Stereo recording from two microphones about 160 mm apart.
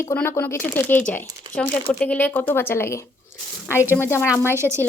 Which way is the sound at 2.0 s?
10° left (ahead or behind).